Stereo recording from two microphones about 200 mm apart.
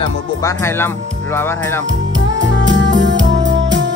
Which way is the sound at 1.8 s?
65° right (ahead or behind).